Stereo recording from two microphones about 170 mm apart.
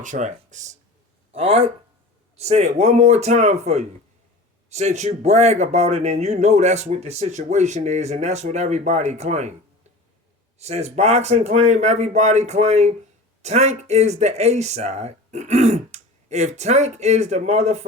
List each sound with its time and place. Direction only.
0.0 s speech: 45° right (ahead or behind)
10.6 s speech: 40° right (ahead or behind)